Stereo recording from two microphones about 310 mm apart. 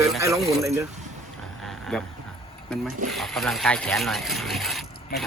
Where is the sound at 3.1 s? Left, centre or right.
Centre.